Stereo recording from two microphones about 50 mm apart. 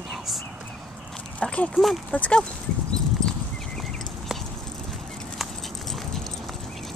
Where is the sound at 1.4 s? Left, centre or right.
Left.